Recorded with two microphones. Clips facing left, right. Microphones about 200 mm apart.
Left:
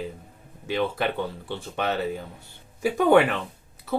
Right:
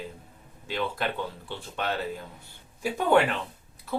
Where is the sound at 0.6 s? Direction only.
60° left (ahead or behind).